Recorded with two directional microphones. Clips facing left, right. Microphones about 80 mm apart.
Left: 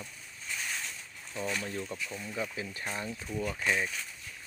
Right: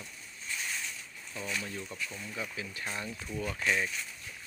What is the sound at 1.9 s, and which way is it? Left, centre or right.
Speech, centre.